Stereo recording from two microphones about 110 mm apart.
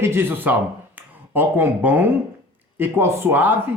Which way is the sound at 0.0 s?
20° right (ahead or behind).